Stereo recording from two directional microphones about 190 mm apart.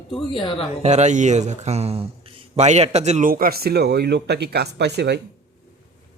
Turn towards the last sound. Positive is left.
turn(degrees=-60)  # may be behind; listen again after turning